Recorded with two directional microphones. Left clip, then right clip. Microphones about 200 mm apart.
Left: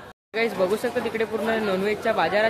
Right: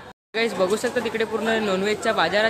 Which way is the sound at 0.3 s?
Centre (ahead or behind).